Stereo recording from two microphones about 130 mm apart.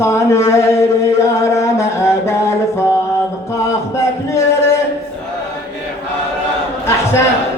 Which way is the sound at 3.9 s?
20° left (ahead or behind).